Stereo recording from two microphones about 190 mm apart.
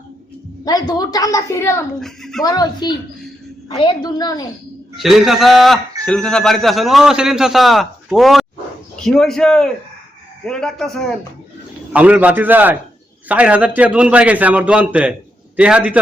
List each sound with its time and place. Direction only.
0.6 s a woman's voice: 20° left (ahead or behind)
2.0 s a man's voice: centre (ahead or behind)
2.4 s a woman's voice: 20° left (ahead or behind)
4.9 s a man's voice: centre (ahead or behind)
11.9 s a man's voice: 10° right (ahead or behind)